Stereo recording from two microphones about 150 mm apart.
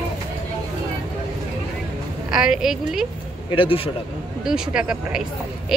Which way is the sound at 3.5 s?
35° left (ahead or behind).